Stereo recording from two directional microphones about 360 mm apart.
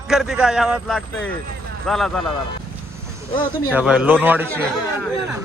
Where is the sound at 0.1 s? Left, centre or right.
Centre.